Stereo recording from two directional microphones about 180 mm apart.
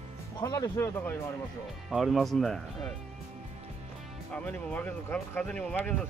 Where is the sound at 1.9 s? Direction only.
Centre (ahead or behind).